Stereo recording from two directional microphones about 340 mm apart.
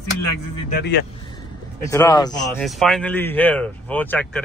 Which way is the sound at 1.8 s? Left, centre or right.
Centre.